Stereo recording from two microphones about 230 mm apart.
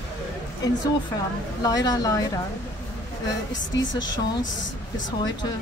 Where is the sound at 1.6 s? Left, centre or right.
Centre.